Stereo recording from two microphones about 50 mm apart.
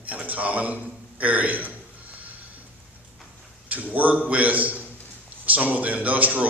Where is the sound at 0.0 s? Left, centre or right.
Right.